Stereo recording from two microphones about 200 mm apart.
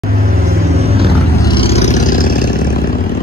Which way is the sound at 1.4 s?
25° left (ahead or behind).